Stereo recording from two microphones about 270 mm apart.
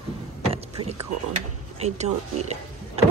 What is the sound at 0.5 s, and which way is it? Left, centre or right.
Rowboat, right.